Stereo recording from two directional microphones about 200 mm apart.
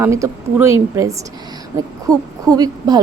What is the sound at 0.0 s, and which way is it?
Speech, 15° right (ahead or behind).